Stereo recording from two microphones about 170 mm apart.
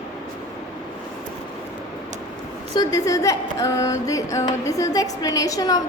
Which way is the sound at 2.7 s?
20° left (ahead or behind).